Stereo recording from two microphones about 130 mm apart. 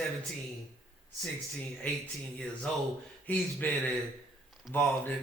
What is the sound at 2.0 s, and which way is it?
Speech, 10° left (ahead or behind).